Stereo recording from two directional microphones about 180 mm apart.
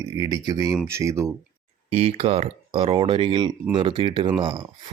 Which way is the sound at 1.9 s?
35° right (ahead or behind).